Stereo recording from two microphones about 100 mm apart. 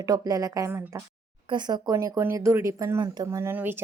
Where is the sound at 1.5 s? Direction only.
45° right (ahead or behind).